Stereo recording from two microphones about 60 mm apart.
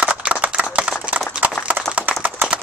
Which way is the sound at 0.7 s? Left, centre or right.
Centre.